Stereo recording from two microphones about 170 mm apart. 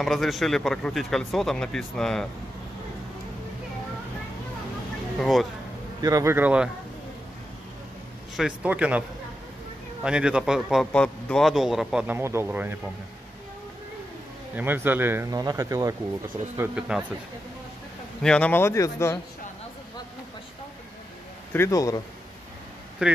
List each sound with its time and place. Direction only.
0.0 s a man's voice: centre (ahead or behind)
5.2 s a man's voice: centre (ahead or behind)
5.9 s speech: 20° right (ahead or behind)
8.4 s speech: 5° right (ahead or behind)
10.0 s a man's voice: 5° right (ahead or behind)
14.5 s a man's voice: 10° right (ahead or behind)
18.2 s speech: 5° left (ahead or behind)
21.5 s speech: 20° left (ahead or behind)
23.0 s speech: 5° right (ahead or behind)